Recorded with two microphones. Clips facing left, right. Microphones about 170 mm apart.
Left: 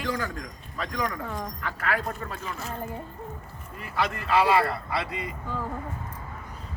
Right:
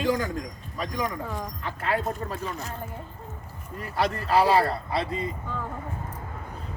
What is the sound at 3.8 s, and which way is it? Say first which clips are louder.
A man's voice: right 2 dB; 35° right (ahead or behind).